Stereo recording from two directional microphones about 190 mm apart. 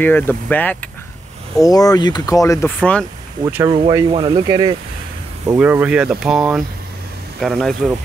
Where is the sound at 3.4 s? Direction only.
15° right (ahead or behind).